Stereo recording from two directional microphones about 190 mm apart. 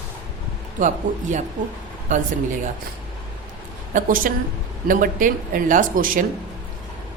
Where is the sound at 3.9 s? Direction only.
45° right (ahead or behind).